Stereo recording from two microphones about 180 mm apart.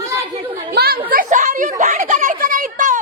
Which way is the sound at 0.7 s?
60° right (ahead or behind).